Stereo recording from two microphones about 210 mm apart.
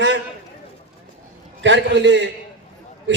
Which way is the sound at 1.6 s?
60° right (ahead or behind).